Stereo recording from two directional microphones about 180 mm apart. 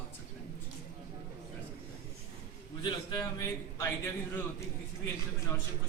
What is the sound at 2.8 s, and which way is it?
A man's voice, 25° left (ahead or behind).